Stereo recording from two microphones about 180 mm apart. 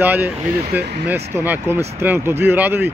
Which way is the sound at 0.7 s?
65° right (ahead or behind).